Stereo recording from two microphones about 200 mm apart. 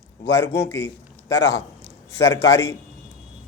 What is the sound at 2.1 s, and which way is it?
Speech, 15° left (ahead or behind).